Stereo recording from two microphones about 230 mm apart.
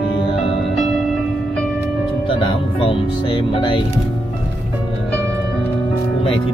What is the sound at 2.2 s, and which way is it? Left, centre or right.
Speech, left.